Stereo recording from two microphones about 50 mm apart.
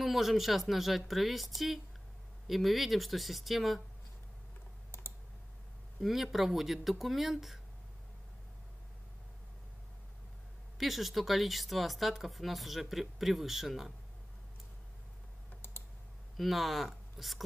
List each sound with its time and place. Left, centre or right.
0.0 s speech: centre
5.9 s speech: centre
10.8 s speech: centre
15.5 s computer keyboard: left
16.3 s speech: centre